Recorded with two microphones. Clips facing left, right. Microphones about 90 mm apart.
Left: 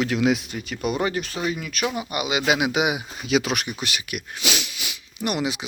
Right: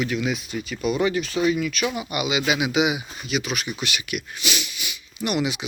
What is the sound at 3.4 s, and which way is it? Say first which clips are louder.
Speech: left 2 dB; 90° left.